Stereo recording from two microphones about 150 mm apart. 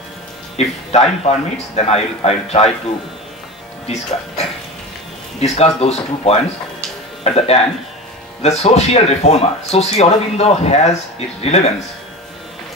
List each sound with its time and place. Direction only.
0.6 s speech: 45° left (ahead or behind)
3.8 s speech: 45° left (ahead or behind)